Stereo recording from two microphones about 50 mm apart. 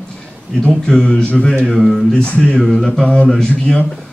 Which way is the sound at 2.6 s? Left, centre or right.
Centre.